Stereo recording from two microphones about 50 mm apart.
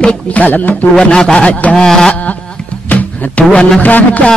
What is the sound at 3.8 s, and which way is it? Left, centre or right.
Speech, left.